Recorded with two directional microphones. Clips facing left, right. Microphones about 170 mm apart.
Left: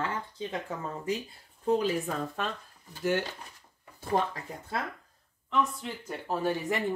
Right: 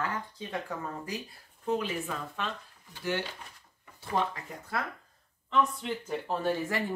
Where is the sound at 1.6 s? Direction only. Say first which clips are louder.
Left 4 dB; 35° left (ahead or behind).